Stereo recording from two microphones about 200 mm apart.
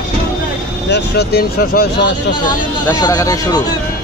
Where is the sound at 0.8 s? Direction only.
55° left (ahead or behind).